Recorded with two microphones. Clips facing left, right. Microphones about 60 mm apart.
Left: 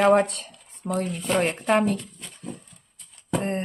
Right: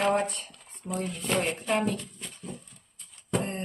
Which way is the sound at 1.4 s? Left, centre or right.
Left.